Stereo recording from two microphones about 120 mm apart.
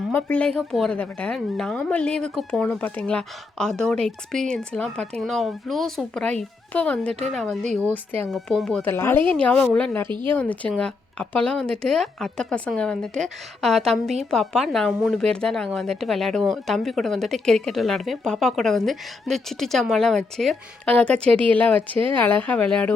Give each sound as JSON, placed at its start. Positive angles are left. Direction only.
{"t": 0.1, "sound": "speech", "side_deg": 15}
{"t": 8.8, "sound": "a woman's voice", "side_deg": 20}